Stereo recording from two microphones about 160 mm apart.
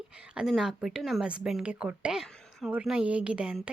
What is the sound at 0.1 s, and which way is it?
Speech, 5° right (ahead or behind).